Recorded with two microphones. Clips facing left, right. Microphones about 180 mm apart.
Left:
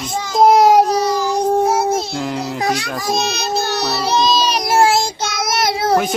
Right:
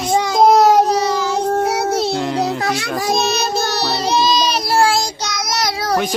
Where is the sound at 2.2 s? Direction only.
Centre (ahead or behind).